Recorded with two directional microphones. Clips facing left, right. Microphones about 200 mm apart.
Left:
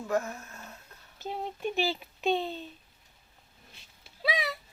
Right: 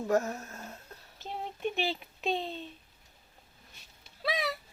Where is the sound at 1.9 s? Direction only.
Centre (ahead or behind).